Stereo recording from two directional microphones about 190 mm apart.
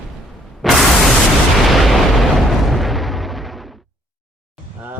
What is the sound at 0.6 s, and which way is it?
White noise, centre (ahead or behind).